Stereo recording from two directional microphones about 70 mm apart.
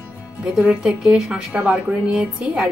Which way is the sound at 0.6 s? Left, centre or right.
Centre.